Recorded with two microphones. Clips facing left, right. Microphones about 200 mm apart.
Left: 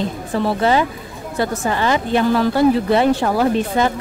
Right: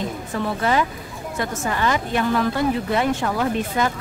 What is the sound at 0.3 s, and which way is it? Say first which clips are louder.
Speech: left 6 dB; 30° left (ahead or behind).